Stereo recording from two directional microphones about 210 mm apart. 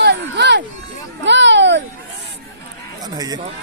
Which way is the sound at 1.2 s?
60° right (ahead or behind).